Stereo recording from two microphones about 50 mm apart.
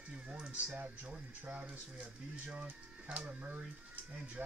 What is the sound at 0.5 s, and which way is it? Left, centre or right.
Speech, right.